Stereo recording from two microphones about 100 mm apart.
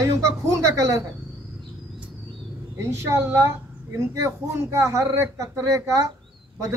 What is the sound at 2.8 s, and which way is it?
A man's voice, 25° right (ahead or behind).